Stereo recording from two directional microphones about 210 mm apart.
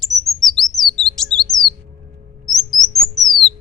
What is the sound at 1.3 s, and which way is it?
Chirp, centre (ahead or behind).